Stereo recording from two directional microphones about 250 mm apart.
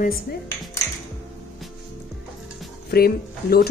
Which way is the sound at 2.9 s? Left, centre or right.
Left.